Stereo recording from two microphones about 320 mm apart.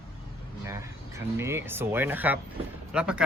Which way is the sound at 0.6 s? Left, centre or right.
Centre.